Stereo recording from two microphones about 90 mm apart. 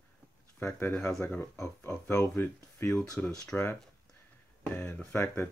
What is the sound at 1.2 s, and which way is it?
Speech, 20° left (ahead or behind).